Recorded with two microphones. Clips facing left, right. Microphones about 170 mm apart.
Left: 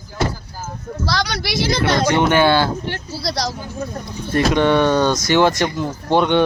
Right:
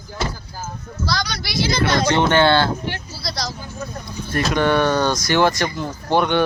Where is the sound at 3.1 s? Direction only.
70° left (ahead or behind).